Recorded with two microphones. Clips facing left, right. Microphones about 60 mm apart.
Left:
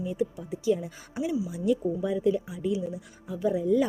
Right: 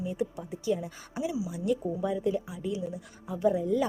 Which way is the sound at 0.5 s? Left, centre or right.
Centre.